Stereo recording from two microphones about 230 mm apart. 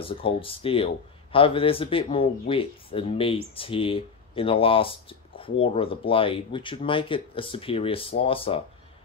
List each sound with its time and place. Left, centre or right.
0.0 s speech: left